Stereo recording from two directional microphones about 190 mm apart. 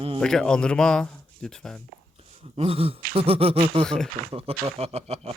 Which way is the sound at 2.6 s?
30° right (ahead or behind).